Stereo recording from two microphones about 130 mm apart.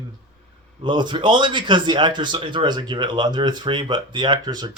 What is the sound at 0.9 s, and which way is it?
A man's voice, 35° right (ahead or behind).